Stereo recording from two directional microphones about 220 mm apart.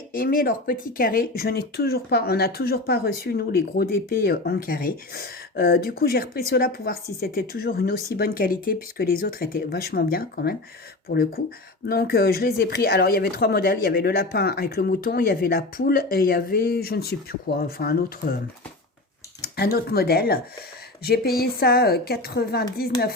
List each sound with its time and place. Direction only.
0.1 s speech: 40° left (ahead or behind)
19.4 s speech: 45° left (ahead or behind)